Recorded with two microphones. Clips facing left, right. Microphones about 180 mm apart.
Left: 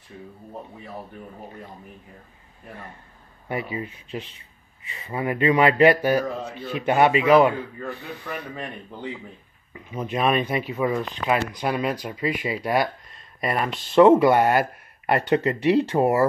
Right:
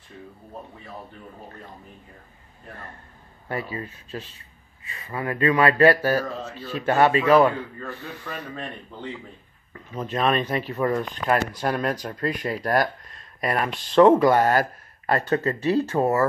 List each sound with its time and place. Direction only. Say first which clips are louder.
3.4 s speech: left 2 dB; 15° left (ahead or behind)